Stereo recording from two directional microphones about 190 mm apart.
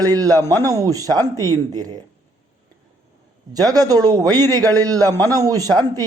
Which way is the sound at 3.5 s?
20° right (ahead or behind).